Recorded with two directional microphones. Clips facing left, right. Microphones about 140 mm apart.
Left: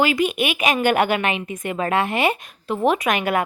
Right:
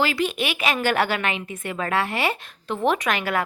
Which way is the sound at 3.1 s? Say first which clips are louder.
Left 3 dB; 20° left (ahead or behind).